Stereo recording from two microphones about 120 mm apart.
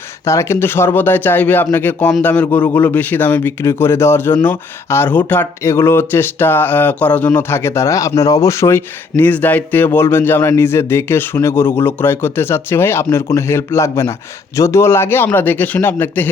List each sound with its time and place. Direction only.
0.3 s speech: 20° left (ahead or behind)